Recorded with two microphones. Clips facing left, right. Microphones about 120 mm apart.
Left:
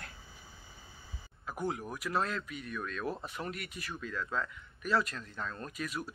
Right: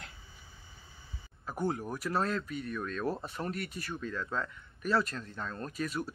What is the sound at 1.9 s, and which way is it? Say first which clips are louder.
Speech: right 2 dB; 30° right (ahead or behind).